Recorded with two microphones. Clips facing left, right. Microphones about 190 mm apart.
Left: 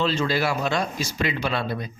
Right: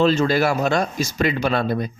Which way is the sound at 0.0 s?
45° right (ahead or behind).